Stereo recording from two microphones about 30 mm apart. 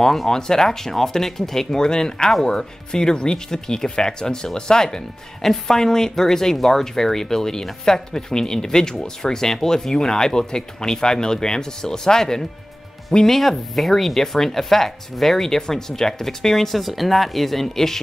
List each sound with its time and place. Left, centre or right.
0.3 s speech: centre
1.9 s speech: left
13.2 s speech: centre
16.7 s speech: centre